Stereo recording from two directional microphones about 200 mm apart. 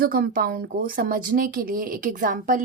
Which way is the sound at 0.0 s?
45° right (ahead or behind).